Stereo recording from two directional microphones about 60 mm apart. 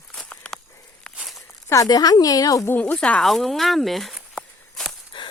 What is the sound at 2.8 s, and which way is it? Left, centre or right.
Speech, left.